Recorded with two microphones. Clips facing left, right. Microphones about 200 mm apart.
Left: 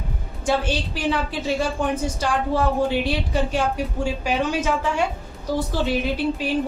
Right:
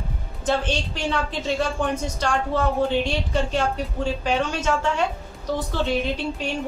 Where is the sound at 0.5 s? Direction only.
10° left (ahead or behind).